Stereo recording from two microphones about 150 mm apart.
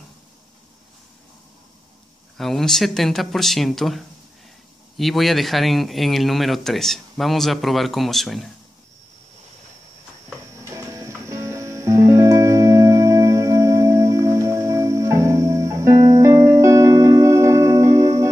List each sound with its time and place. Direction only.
2.3 s speech: centre (ahead or behind)
10.5 s music: 20° right (ahead or behind)